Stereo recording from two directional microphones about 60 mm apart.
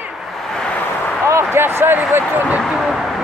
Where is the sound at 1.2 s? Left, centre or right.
Right.